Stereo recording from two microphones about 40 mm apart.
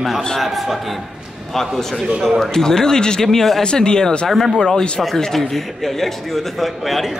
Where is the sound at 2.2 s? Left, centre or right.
Centre.